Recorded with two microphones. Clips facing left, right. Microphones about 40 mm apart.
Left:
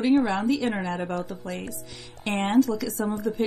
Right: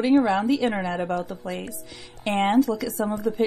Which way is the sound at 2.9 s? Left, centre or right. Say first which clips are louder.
Right 2 dB; right.